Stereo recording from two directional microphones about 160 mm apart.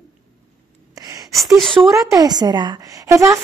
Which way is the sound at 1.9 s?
20° right (ahead or behind).